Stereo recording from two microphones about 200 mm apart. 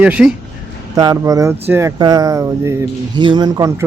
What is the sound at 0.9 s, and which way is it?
A man's voice, 15° right (ahead or behind).